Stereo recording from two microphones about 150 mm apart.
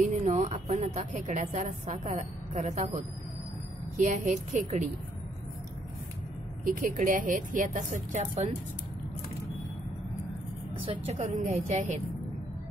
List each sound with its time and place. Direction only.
0.0 s a woman's voice: 55° right (ahead or behind)
3.9 s a woman's voice: 55° right (ahead or behind)
6.6 s a woman's voice: 60° right (ahead or behind)
11.1 s a woman's voice: 55° right (ahead or behind)